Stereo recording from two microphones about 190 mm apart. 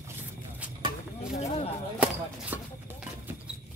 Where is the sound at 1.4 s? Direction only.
35° left (ahead or behind).